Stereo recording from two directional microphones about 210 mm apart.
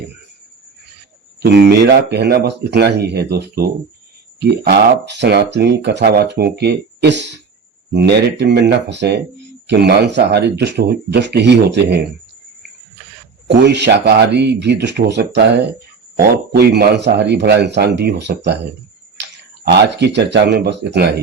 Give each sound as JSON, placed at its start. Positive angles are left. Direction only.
{"t": 1.4, "sound": "speech", "side_deg": -50}
{"t": 13.5, "sound": "speech", "side_deg": -55}
{"t": 19.6, "sound": "speech", "side_deg": -55}